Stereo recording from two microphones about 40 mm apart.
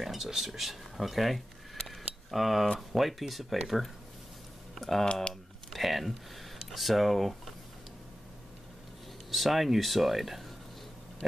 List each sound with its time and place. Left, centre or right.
0.0 s speech: centre
5.0 s speech: left
5.3 s speech: centre
9.3 s speech: centre